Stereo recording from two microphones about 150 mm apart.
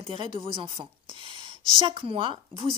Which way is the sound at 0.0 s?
35° right (ahead or behind).